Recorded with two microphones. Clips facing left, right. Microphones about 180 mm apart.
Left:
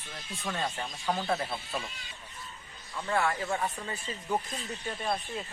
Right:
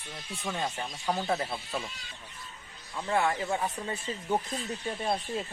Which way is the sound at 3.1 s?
20° right (ahead or behind).